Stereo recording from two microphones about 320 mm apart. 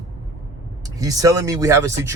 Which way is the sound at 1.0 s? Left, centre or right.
Centre.